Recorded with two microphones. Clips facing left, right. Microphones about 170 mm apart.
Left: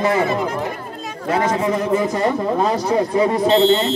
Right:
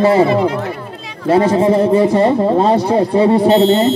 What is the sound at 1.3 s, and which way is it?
A man's voice, 30° right (ahead or behind).